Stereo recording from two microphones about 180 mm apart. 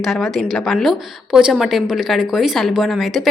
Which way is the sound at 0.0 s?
Centre (ahead or behind).